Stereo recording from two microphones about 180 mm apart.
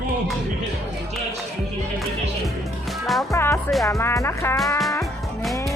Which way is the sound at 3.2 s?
15° left (ahead or behind).